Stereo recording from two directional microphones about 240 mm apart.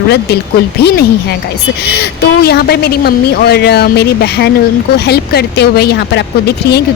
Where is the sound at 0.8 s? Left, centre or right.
Left.